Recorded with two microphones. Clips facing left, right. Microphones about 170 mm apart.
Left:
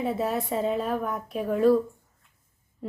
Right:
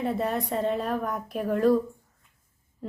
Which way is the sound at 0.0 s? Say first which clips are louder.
Even; centre (ahead or behind).